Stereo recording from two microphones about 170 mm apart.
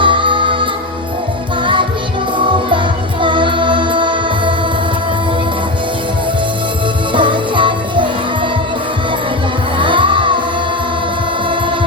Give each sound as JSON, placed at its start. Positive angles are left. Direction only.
{"t": 0.0, "sound": "music", "side_deg": -30}
{"t": 2.5, "sound": "music", "side_deg": -30}
{"t": 7.1, "sound": "music", "side_deg": -30}
{"t": 9.7, "sound": "music", "side_deg": -30}